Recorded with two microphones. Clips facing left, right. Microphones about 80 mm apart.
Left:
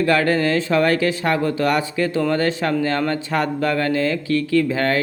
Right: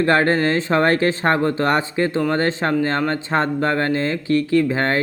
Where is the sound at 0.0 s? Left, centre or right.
Right.